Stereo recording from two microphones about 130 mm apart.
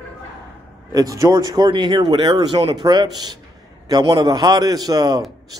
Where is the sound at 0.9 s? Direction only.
25° right (ahead or behind).